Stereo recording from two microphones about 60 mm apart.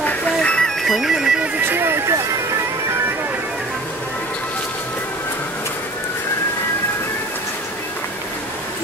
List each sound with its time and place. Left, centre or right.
0.0 s music: centre
0.8 s bagpipes: centre
1.7 s a sound: right